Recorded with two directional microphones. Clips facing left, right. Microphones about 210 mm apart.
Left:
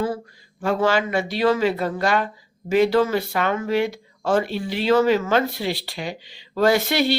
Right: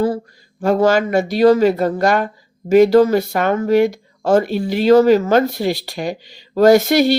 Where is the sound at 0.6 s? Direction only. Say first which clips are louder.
Right 6 dB; 40° right (ahead or behind).